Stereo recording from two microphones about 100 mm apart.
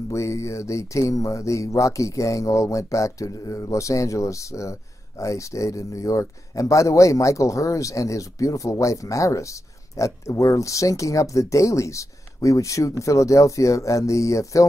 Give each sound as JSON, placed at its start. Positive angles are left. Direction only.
{"t": 0.1, "sound": "speech", "side_deg": 30}